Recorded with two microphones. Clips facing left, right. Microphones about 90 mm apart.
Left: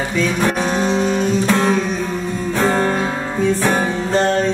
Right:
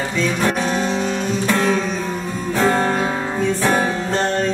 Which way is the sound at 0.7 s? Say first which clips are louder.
Left 2 dB; 25° left (ahead or behind).